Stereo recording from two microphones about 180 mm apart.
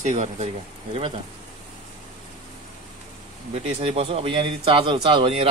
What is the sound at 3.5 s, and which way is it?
Speech, 35° right (ahead or behind).